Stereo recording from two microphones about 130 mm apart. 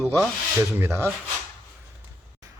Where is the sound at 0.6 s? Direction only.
20° right (ahead or behind).